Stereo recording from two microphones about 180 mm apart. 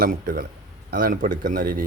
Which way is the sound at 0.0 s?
55° right (ahead or behind).